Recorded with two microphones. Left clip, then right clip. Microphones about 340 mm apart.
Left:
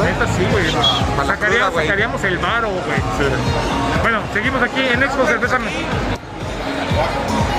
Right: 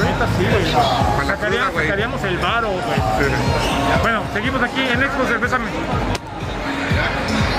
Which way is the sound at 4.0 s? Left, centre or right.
Centre.